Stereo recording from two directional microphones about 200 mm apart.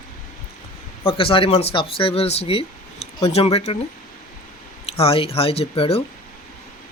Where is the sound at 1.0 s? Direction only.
25° left (ahead or behind).